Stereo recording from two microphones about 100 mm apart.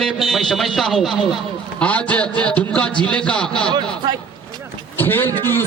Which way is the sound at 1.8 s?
15° left (ahead or behind).